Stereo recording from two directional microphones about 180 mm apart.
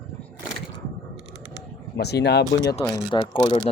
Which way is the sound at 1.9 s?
65° left (ahead or behind).